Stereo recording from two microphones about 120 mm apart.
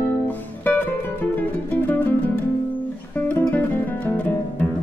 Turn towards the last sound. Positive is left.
turn(degrees=15)  # may be behind; listen again after turning